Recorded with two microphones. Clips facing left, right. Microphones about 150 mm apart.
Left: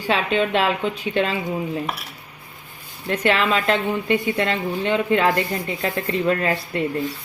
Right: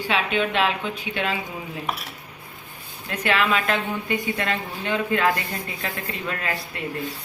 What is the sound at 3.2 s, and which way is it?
A woman's voice, 30° left (ahead or behind).